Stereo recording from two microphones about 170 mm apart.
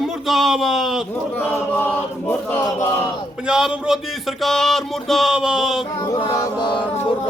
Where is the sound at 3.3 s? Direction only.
5° right (ahead or behind).